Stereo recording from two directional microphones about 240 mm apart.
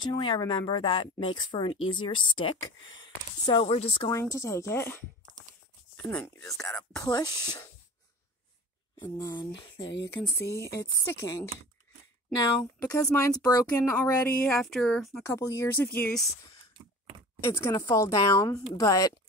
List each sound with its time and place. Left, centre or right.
0.0 s speech: centre
4.1 s speech: centre
6.0 s speech: centre
9.0 s speech: centre
12.4 s speech: centre
15.3 s speech: centre
17.4 s speech: centre